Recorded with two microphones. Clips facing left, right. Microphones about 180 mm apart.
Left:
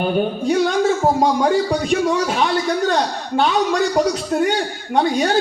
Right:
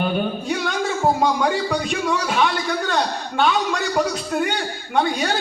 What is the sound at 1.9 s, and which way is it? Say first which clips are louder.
A man's voice: left 5 dB; 35° left (ahead or behind).